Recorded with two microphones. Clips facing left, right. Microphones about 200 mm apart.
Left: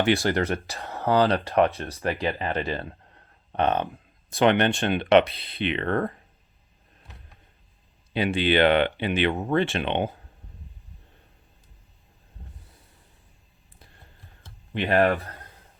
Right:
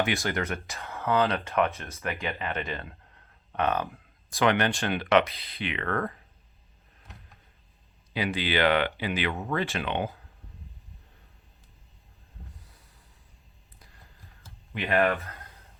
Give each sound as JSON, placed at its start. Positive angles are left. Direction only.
{"t": 0.0, "sound": "speech", "side_deg": 30}
{"t": 8.1, "sound": "speech", "side_deg": 25}
{"t": 13.7, "sound": "a sound", "side_deg": 30}
{"t": 14.7, "sound": "speech", "side_deg": 35}